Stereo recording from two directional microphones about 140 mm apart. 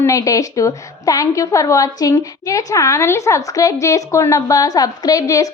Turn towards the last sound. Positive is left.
turn(degrees=25)  # may be behind; listen again after turning